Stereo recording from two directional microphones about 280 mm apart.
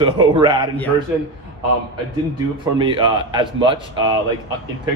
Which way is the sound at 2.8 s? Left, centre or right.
Centre.